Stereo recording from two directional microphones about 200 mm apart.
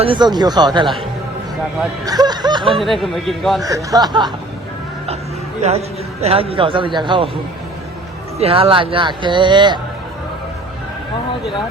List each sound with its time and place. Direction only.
0.0 s speech: 25° right (ahead or behind)
2.0 s speech: 20° right (ahead or behind)
2.8 s a man's voice: centre (ahead or behind)
3.9 s speech: 20° right (ahead or behind)
6.2 s speech: 30° right (ahead or behind)
8.4 s speech: 30° right (ahead or behind)